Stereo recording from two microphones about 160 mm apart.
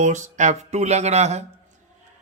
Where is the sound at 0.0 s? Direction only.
50° right (ahead or behind).